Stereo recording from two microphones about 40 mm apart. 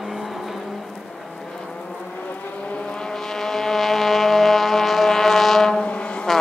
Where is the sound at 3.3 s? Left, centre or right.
Centre.